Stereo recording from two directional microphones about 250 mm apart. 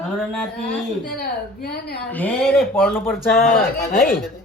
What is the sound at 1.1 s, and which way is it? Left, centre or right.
Speech, left.